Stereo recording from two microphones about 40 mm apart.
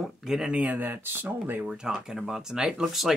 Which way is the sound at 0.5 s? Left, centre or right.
Right.